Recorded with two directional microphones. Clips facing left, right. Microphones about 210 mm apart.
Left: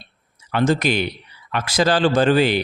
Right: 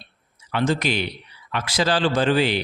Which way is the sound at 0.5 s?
45° left (ahead or behind).